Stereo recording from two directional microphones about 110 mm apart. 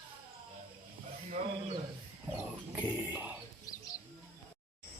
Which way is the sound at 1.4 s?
70° right (ahead or behind).